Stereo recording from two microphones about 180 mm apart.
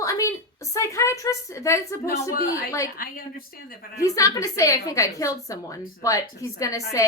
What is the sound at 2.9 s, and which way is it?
Speech, 55° left (ahead or behind).